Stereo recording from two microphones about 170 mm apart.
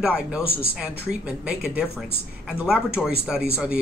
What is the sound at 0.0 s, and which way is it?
Speech, 5° right (ahead or behind).